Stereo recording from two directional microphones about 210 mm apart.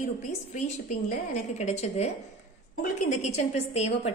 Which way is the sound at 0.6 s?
35° left (ahead or behind).